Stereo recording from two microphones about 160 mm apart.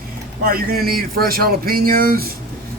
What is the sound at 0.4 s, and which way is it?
Speech, 65° right (ahead or behind).